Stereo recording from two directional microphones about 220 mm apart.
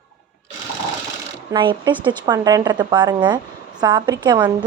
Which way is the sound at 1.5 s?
20° right (ahead or behind).